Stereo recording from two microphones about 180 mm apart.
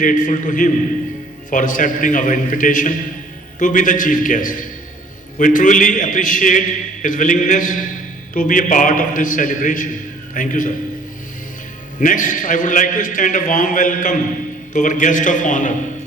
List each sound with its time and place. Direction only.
0.0 s a man's voice: 45° left (ahead or behind)
11.9 s a man's voice: 45° left (ahead or behind)